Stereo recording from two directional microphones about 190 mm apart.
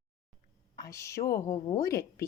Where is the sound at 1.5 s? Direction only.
35° left (ahead or behind).